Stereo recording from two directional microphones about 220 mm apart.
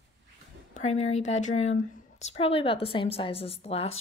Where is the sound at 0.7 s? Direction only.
30° left (ahead or behind).